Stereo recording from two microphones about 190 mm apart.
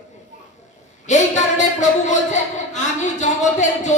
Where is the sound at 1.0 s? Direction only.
40° left (ahead or behind).